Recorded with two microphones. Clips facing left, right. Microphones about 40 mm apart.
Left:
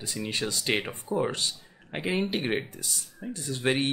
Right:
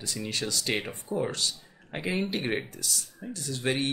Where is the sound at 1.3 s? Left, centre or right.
Centre.